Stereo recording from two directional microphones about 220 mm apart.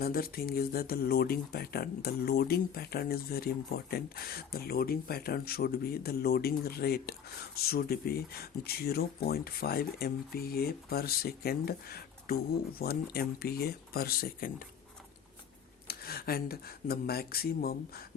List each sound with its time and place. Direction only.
0.0 s speech: 45° left (ahead or behind)
15.9 s speech: 45° left (ahead or behind)